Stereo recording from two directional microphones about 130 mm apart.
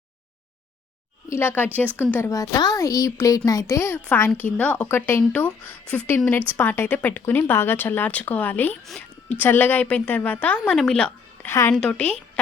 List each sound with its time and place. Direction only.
1.3 s speech: 20° left (ahead or behind)
2.3 s a woman's voice: 25° left (ahead or behind); by 11.1 s 5° left (ahead or behind)
11.4 s speech: 20° left (ahead or behind)
11.7 s speech: 10° left (ahead or behind)